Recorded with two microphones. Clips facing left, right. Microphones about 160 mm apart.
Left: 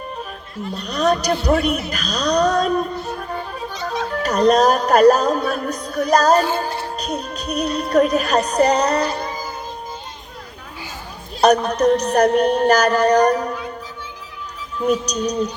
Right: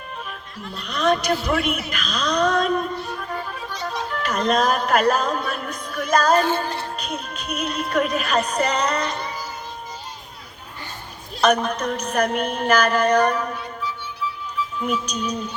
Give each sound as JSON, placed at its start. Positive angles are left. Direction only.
{"t": 0.8, "sound": "speech", "side_deg": 40}
{"t": 11.3, "sound": "speech", "side_deg": 35}